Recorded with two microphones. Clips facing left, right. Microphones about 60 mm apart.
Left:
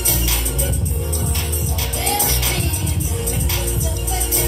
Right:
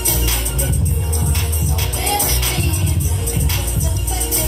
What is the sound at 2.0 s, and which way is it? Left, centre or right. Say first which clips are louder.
Music: right 1 dB; right.